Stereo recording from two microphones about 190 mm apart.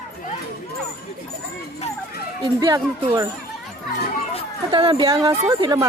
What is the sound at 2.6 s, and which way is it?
Speech, 20° right (ahead or behind).